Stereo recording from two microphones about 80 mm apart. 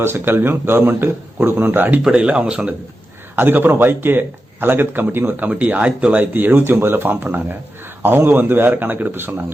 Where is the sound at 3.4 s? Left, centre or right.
Right.